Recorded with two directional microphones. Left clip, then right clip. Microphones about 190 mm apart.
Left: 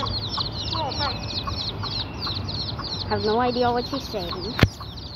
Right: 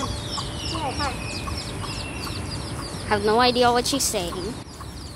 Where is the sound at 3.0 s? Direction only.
20° right (ahead or behind).